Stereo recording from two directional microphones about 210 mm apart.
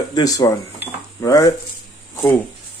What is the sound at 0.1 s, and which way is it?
Speech, 15° left (ahead or behind).